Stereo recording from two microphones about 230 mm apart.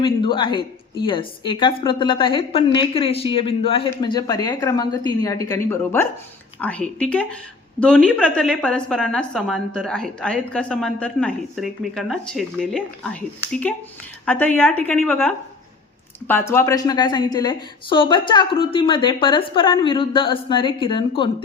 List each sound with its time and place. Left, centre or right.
0.0 s a woman's voice: left